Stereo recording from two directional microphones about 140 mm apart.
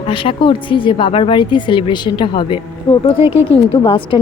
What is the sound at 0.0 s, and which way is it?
A woman's voice, 40° left (ahead or behind).